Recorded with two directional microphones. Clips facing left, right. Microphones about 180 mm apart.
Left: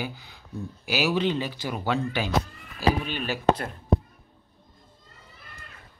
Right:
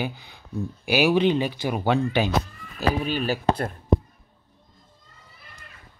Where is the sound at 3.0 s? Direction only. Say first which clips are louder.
Right 1 dB; 40° right (ahead or behind).